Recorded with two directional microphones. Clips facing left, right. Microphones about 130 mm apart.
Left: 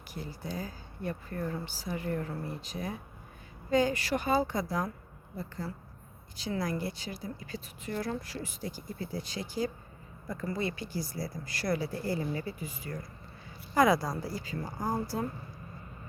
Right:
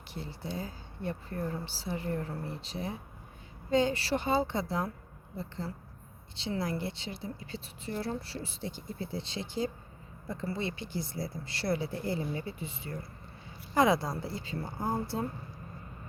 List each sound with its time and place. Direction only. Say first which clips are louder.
0.1 s speech: even; 30° right (ahead or behind)